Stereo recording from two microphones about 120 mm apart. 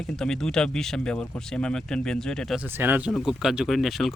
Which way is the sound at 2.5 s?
15° right (ahead or behind).